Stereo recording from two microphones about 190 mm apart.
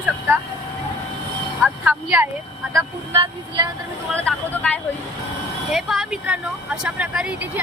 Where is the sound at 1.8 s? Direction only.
10° right (ahead or behind).